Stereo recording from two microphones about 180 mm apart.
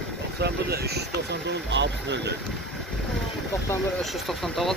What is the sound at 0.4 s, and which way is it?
Speech, 65° right (ahead or behind).